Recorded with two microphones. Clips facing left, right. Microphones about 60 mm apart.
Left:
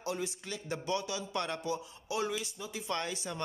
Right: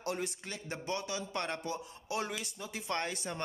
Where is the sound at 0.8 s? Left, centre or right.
Right.